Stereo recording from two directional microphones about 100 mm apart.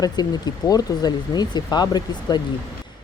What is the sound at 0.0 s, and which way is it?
A woman's voice, 40° left (ahead or behind).